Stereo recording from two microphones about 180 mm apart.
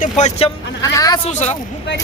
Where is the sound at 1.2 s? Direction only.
40° left (ahead or behind).